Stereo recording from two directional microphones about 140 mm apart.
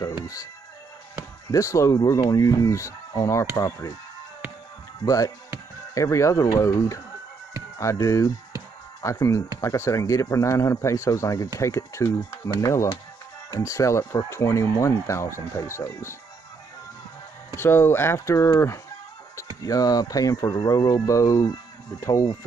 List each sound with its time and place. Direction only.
0.0 s music: 25° left (ahead or behind)
1.5 s speech: 25° left (ahead or behind)
2.1 s speech: 35° left (ahead or behind)
2.4 s speech: 25° left (ahead or behind)
5.0 s speech: 25° left (ahead or behind)
17.6 s speech: 15° left (ahead or behind)